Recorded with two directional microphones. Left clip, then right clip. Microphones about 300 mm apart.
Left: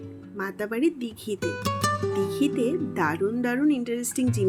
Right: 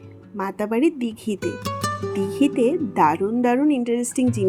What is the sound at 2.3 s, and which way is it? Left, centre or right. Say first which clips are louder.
Speech: right 5 dB; centre.